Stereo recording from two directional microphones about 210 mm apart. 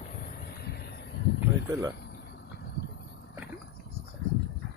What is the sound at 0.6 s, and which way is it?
Vehicle, 50° left (ahead or behind).